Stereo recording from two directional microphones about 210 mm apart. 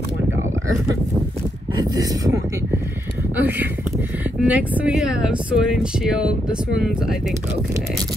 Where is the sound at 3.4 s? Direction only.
10° right (ahead or behind).